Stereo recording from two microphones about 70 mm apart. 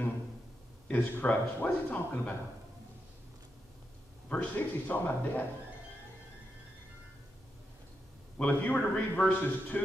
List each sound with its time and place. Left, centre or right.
0.8 s speech: left
4.3 s speech: left
8.4 s speech: centre